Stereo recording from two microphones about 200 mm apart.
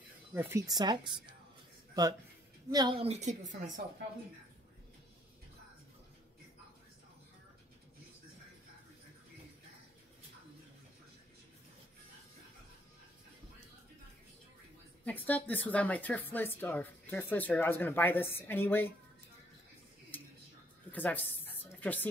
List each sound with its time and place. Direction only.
0.3 s speech: 10° right (ahead or behind)
2.7 s speech: 20° right (ahead or behind)
3.1 s a woman's voice: 35° right (ahead or behind)
15.0 s speech: 10° left (ahead or behind)
20.1 s a sound: 10° left (ahead or behind)